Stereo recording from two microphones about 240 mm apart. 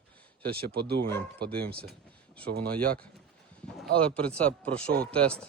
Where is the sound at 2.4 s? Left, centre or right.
Right.